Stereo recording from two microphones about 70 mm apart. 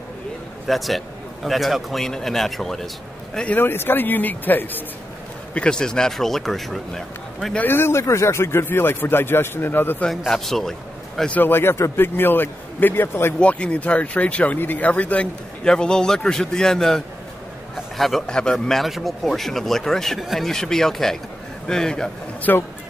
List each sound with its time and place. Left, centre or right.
0.7 s speech: centre
3.5 s speech: left
5.5 s speech: centre
7.5 s speech: left
10.3 s a man's voice: centre
11.2 s speech: left
13.4 s speech: centre
15.6 s speech: centre
22.5 s speech: left